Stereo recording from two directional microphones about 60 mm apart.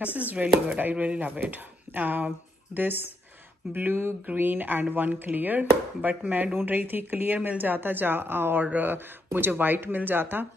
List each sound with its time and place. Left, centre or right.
0.3 s speech: right